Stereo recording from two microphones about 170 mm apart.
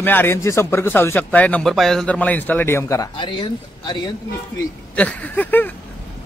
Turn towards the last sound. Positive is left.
turn(degrees=10)  # may be behind; listen again after turning